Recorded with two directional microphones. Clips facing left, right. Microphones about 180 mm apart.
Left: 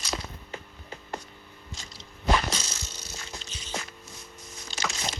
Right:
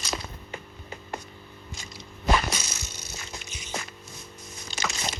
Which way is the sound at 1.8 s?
10° right (ahead or behind).